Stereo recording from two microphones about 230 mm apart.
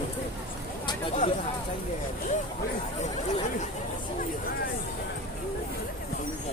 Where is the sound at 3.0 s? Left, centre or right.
Left.